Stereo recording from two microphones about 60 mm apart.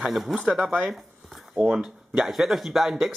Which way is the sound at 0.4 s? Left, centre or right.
Centre.